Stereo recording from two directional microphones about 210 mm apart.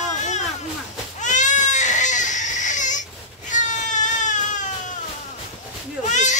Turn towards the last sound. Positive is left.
turn(degrees=35)  # may be behind; listen again after turning